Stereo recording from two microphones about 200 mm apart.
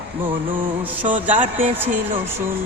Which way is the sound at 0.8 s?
10° right (ahead or behind).